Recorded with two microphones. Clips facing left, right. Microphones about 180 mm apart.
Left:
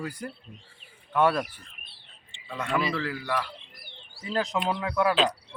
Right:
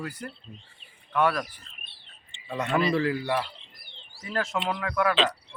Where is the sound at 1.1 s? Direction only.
25° left (ahead or behind).